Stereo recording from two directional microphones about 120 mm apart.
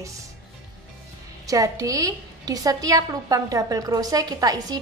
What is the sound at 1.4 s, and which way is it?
A woman's voice, 30° right (ahead or behind).